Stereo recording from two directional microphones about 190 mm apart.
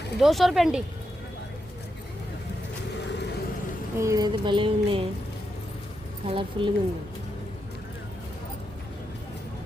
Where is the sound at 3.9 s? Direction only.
20° right (ahead or behind).